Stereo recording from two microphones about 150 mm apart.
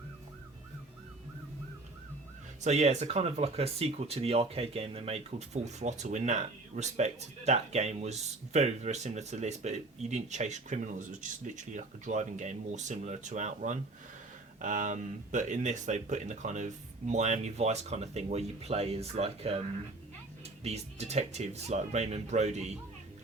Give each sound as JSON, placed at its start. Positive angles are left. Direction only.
{"t": 2.6, "sound": "speech", "side_deg": -45}